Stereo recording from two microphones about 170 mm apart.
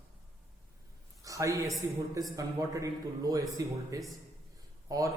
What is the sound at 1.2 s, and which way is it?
A man's voice, 20° right (ahead or behind).